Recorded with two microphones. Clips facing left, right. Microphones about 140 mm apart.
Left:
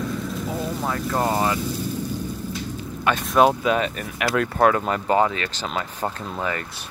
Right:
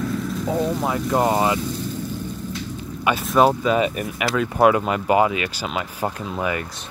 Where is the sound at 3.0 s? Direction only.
5° right (ahead or behind).